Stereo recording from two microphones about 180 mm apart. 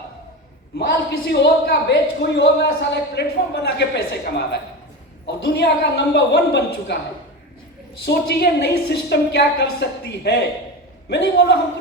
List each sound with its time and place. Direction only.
0.8 s speech: 70° left (ahead or behind)
8.0 s a woman's voice: 65° left (ahead or behind)